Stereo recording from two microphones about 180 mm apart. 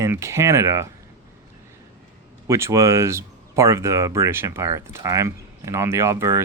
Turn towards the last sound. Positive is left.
turn(degrees=-15)  # may be behind; listen again after turning